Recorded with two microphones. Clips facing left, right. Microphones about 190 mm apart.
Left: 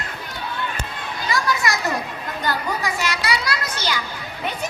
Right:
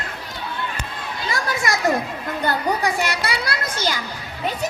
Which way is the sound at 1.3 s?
50° right (ahead or behind).